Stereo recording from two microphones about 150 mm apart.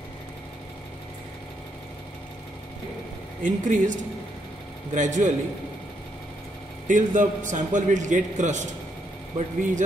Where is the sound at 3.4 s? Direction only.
60° right (ahead or behind).